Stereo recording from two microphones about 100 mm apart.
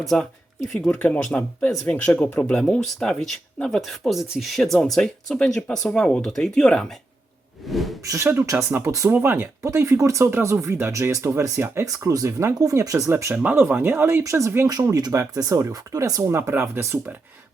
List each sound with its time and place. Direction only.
0.1 s speech: 5° left (ahead or behind)
0.9 s speech: 15° left (ahead or behind); by 7.9 s centre (ahead or behind)
8.0 s speech: 35° right (ahead or behind)
13.3 s speech: 15° right (ahead or behind); by 16.2 s 35° right (ahead or behind)
16.3 s speech: 25° right (ahead or behind)